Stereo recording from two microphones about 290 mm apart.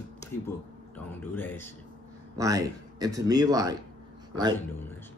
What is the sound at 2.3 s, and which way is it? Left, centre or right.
Speech, centre.